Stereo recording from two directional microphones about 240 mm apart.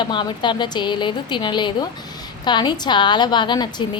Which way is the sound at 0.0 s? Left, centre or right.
Centre.